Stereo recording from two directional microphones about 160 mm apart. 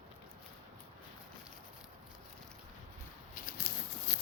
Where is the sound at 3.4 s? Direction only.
55° left (ahead or behind).